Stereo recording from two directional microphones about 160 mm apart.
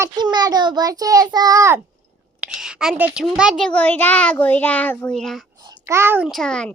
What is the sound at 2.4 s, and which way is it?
A child's voice, 5° right (ahead or behind).